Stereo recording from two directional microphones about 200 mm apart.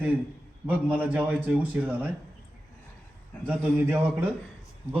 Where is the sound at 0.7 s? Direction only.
10° right (ahead or behind).